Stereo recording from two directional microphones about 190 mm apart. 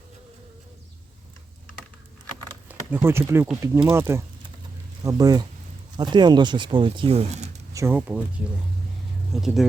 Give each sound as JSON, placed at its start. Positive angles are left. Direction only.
{"t": 2.6, "sound": "speech", "side_deg": -10}
{"t": 7.7, "sound": "speech", "side_deg": -15}
{"t": 9.3, "sound": "speech", "side_deg": 0}